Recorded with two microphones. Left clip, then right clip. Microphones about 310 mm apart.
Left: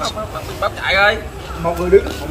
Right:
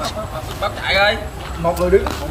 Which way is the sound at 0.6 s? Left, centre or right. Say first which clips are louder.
Left 2 dB; centre.